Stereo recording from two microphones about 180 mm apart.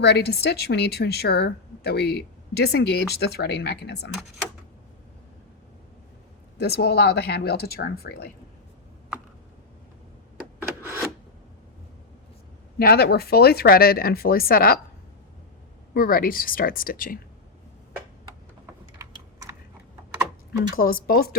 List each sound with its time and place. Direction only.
0.0 s a woman's voice: 65° left (ahead or behind)
6.6 s a woman's voice: 65° left (ahead or behind)
12.8 s a woman's voice: 60° left (ahead or behind)
16.0 s speech: 55° left (ahead or behind)
18.9 s typing: 20° right (ahead or behind)
20.7 s a woman's voice: 55° left (ahead or behind)